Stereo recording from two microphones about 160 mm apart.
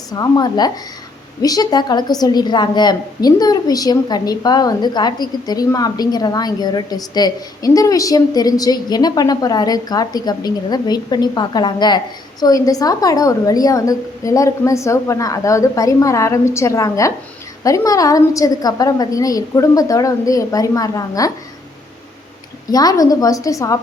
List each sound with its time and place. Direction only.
0.1 s a woman's voice: 25° left (ahead or behind)
22.7 s a woman's voice: 25° left (ahead or behind)